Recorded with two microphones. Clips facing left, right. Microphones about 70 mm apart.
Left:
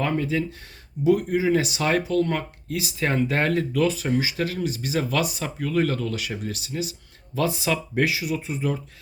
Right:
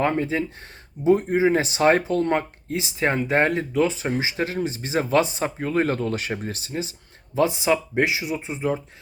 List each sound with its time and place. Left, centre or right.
0.0 s speech: right